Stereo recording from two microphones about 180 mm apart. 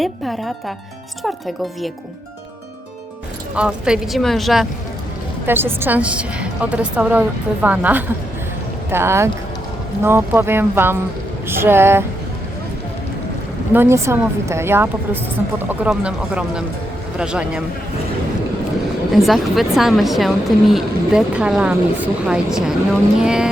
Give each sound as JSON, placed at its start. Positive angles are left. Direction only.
{"t": 0.0, "sound": "speech", "side_deg": 0}
{"t": 3.5, "sound": "speech", "side_deg": -5}
{"t": 5.5, "sound": "speech", "side_deg": -10}
{"t": 13.7, "sound": "speech", "side_deg": -15}
{"t": 19.1, "sound": "speech", "side_deg": 0}